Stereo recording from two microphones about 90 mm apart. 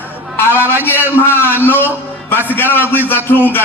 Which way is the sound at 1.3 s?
25° left (ahead or behind).